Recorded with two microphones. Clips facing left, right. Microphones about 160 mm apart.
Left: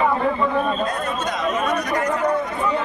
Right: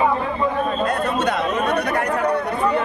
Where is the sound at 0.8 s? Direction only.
65° right (ahead or behind).